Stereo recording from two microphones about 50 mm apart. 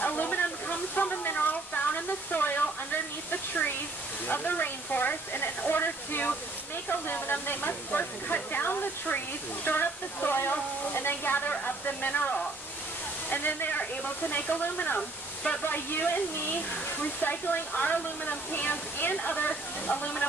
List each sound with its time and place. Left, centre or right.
0.0 s waterfall: left
1.3 s a sound: left
4.3 s speech: left
13.3 s speech: left
15.0 s speech: left
15.6 s speech: left
19.3 s speech: left